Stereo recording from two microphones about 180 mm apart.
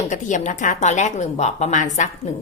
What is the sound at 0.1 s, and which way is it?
A woman's voice, 45° left (ahead or behind).